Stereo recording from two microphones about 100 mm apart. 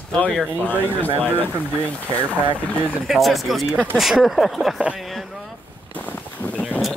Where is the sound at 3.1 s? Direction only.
Centre (ahead or behind).